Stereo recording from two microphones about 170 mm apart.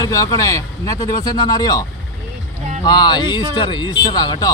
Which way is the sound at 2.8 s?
25° left (ahead or behind).